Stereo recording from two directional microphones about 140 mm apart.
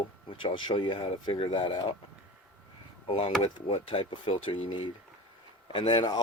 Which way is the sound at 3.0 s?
40° left (ahead or behind).